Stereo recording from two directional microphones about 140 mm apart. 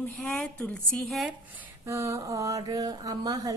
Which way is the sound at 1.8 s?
20° right (ahead or behind).